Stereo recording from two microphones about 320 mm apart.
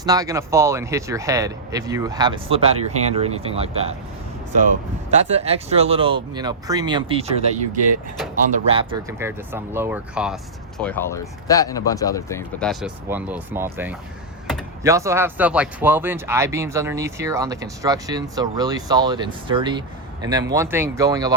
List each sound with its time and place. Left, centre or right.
0.0 s speech: centre
5.1 s speech: centre